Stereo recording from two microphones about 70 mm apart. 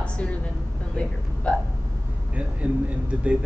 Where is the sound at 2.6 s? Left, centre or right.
Centre.